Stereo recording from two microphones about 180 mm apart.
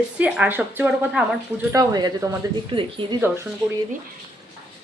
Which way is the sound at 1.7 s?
20° right (ahead or behind).